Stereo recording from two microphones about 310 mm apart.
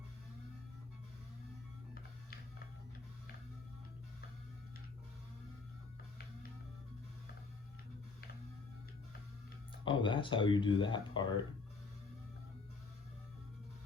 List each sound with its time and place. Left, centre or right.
9.8 s speech: centre